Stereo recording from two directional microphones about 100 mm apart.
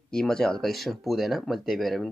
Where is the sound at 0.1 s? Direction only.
5° left (ahead or behind).